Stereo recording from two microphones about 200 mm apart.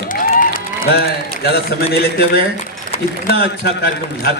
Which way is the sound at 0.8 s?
45° left (ahead or behind).